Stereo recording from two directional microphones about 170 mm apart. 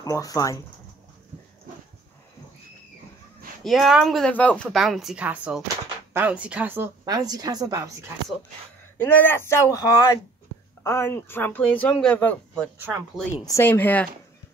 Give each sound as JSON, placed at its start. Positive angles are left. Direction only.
{"t": 0.0, "sound": "speech", "side_deg": 20}
{"t": 3.6, "sound": "speech", "side_deg": 0}
{"t": 7.1, "sound": "a woman's voice", "side_deg": -20}
{"t": 8.9, "sound": "speech", "side_deg": 10}
{"t": 12.7, "sound": "speech", "side_deg": -10}
{"t": 13.4, "sound": "speech", "side_deg": 15}